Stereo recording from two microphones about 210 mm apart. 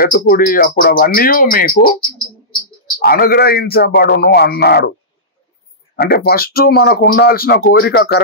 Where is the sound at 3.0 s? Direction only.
45° left (ahead or behind).